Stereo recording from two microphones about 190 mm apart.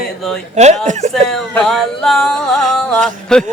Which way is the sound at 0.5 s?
35° right (ahead or behind).